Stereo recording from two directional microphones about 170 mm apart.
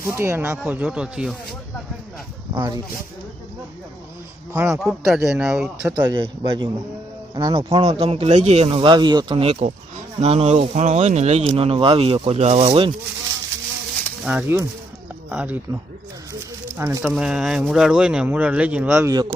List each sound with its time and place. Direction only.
0.1 s speech: 15° right (ahead or behind)
2.6 s speech: 20° right (ahead or behind)
4.5 s speech: 15° right (ahead or behind)
4.8 s speech: centre (ahead or behind)
6.0 s a man's voice: 25° right (ahead or behind)
14.3 s speech: 10° right (ahead or behind)
17.0 s speech: 5° right (ahead or behind); by 19.3 s 20° right (ahead or behind)